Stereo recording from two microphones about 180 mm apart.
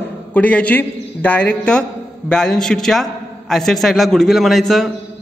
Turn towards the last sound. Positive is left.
turn(degrees=0)  # may be behind; listen again after turning